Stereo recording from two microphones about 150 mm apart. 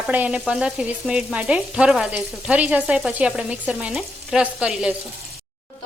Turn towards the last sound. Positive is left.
turn(degrees=-5)  # may be behind; listen again after turning